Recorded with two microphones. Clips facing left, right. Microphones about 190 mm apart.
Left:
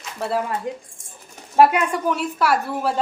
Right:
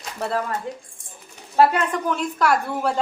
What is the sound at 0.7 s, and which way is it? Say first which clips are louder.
A woman's voice: left 3 dB; 15° left (ahead or behind).